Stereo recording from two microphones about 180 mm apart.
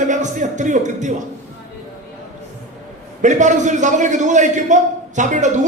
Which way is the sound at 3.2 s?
40° right (ahead or behind).